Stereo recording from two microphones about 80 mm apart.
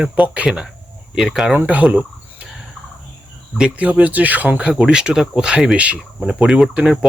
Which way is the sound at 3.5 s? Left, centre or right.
Centre.